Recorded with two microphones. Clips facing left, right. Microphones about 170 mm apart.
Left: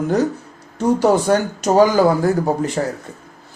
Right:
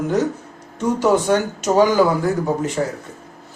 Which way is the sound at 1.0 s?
35° left (ahead or behind).